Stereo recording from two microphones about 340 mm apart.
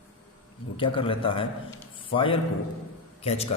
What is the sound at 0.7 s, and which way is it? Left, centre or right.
A man's voice, centre.